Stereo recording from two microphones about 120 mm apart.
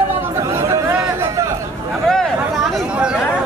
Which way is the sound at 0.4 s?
25° right (ahead or behind).